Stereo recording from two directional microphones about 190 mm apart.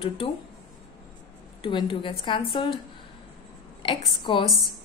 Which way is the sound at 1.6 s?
25° left (ahead or behind).